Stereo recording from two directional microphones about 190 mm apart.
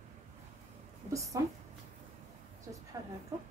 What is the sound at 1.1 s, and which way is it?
Speech, 15° right (ahead or behind).